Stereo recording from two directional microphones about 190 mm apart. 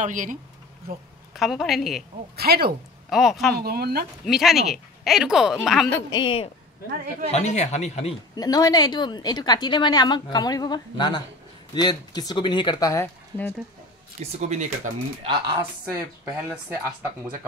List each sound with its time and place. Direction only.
0.0 s speech: 45° right (ahead or behind)
1.3 s speech: centre (ahead or behind)
2.3 s speech: 55° right (ahead or behind)
3.1 s speech: centre (ahead or behind)
3.5 s speech: 55° right (ahead or behind)
4.3 s speech: centre (ahead or behind)
5.9 s a woman's voice: 15° left (ahead or behind)
6.9 s speech: 55° right (ahead or behind)
7.2 s speech: 35° left (ahead or behind)
8.4 s a woman's voice: 20° left (ahead or behind)
14.2 s speech: 35° right (ahead or behind)
15.8 s speech: 10° right (ahead or behind)